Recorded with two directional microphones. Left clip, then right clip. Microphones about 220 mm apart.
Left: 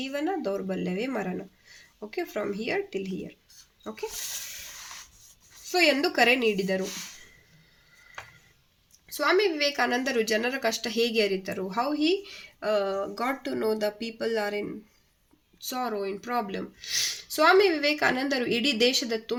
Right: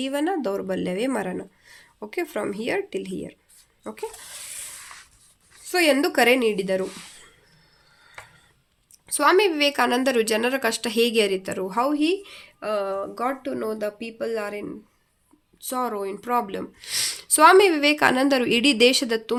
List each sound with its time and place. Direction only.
0.0 s speech: 45° right (ahead or behind)
5.6 s speech: 35° right (ahead or behind)
9.1 s speech: 45° right (ahead or behind)